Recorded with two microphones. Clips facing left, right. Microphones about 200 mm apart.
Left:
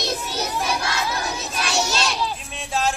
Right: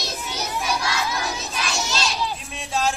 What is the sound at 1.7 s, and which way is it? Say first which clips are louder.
Children playing: left 4 dB; 70° left (ahead or behind).